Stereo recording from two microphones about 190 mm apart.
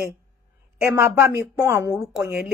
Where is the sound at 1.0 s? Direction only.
15° right (ahead or behind).